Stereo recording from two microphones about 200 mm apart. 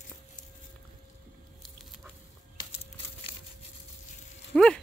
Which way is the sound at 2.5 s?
25° left (ahead or behind).